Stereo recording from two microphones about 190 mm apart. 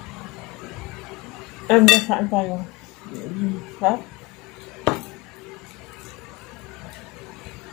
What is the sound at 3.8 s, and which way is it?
Speech, centre (ahead or behind).